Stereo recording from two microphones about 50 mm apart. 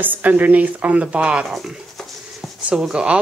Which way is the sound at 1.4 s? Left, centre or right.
Centre.